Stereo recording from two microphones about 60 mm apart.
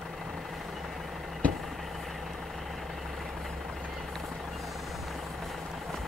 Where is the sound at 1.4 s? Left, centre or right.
Left.